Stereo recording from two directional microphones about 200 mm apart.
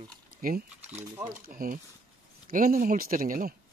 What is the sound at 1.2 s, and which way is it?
Speech, 45° right (ahead or behind).